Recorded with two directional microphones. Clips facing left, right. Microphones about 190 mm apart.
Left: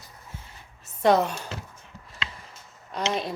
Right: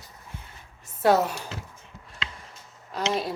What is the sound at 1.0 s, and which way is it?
Speech, 5° right (ahead or behind).